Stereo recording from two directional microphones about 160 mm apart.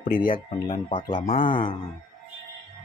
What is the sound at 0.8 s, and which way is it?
Speech, 30° left (ahead or behind).